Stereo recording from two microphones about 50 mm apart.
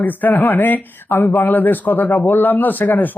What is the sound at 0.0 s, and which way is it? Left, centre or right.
Speech, left.